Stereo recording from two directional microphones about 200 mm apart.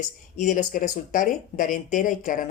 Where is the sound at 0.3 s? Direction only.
40° left (ahead or behind).